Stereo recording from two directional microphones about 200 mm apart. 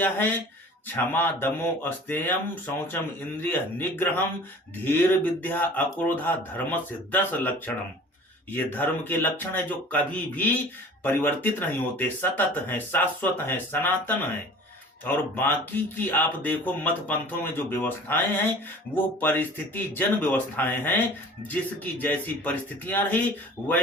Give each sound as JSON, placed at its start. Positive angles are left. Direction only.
{"t": 0.0, "sound": "speech", "side_deg": 10}